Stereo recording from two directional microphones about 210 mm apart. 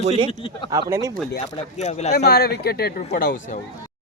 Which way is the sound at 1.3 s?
30° left (ahead or behind).